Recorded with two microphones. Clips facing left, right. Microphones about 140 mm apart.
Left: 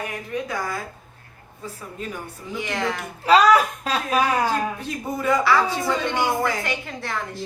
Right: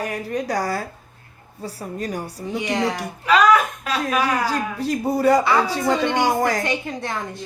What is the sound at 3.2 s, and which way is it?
A woman's voice, 35° left (ahead or behind).